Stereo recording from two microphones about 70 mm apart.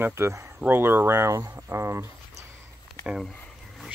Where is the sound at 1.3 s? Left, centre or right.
Right.